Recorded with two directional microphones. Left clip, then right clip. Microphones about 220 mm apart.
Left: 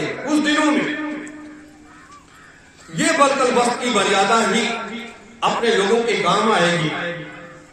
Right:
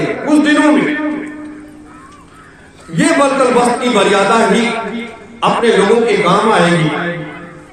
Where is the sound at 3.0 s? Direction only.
10° left (ahead or behind).